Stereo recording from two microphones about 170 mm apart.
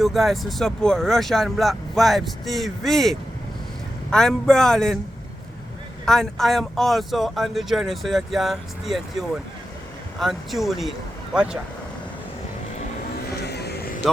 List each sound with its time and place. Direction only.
0.0 s speech: centre (ahead or behind)
6.1 s speech: 5° left (ahead or behind)
13.4 s vehicle: 75° left (ahead or behind)